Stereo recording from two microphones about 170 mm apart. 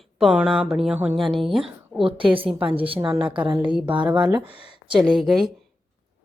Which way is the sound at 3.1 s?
5° right (ahead or behind).